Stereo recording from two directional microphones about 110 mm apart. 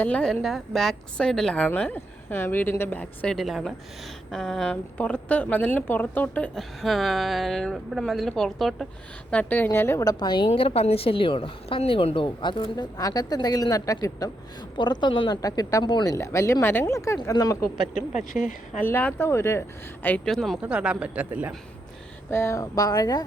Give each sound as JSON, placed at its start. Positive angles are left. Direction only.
{"t": 0.0, "sound": "a woman's voice", "side_deg": 10}
{"t": 3.3, "sound": "a woman's voice", "side_deg": 0}
{"t": 6.6, "sound": "speech", "side_deg": 0}
{"t": 9.3, "sound": "speech", "side_deg": 15}
{"t": 10.5, "sound": "a woman's voice", "side_deg": 65}
{"t": 14.8, "sound": "speech", "side_deg": 45}
{"t": 15.3, "sound": "a woman's voice", "side_deg": 35}
{"t": 16.0, "sound": "a woman's voice", "side_deg": 25}
{"t": 18.3, "sound": "speech", "side_deg": 0}
{"t": 18.8, "sound": "speech", "side_deg": 15}
{"t": 20.2, "sound": "speech", "side_deg": 0}
{"t": 20.6, "sound": "speech", "side_deg": -10}
{"t": 22.3, "sound": "a woman's voice", "side_deg": 25}